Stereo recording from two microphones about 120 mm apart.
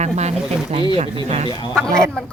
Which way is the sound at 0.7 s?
50° right (ahead or behind).